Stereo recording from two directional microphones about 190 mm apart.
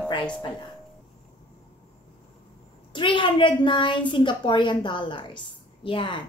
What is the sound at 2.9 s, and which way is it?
A woman's voice, 25° left (ahead or behind).